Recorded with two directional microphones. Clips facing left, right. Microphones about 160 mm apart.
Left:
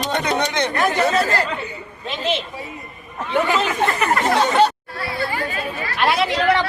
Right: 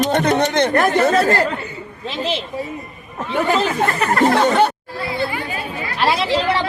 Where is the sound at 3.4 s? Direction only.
35° right (ahead or behind).